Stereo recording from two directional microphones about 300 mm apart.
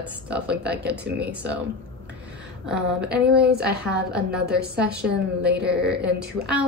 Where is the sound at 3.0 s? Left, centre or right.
Right.